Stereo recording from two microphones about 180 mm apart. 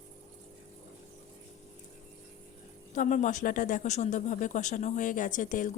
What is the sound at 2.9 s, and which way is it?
Speech, 45° left (ahead or behind).